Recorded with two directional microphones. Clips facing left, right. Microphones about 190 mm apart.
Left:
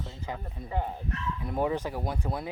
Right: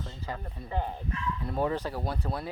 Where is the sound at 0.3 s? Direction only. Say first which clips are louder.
Even; 10° left (ahead or behind).